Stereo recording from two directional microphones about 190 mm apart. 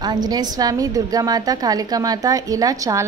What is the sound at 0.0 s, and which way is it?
A woman's voice, 20° right (ahead or behind).